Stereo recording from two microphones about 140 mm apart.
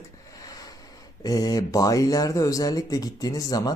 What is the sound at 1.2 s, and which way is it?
Speech, 25° left (ahead or behind).